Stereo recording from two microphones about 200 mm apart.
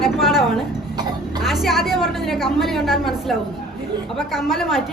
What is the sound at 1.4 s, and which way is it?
A woman's voice, centre (ahead or behind).